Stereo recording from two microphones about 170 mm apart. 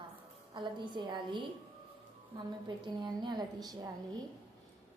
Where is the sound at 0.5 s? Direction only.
30° right (ahead or behind).